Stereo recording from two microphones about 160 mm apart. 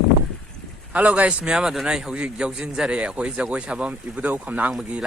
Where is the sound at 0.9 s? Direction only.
10° right (ahead or behind).